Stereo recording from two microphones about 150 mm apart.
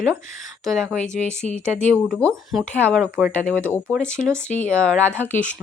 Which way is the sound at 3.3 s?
10° left (ahead or behind).